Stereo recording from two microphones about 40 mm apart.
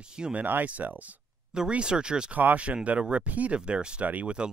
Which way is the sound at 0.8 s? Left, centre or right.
Right.